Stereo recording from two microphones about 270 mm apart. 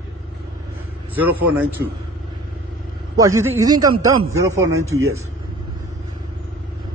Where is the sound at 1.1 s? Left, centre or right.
Right.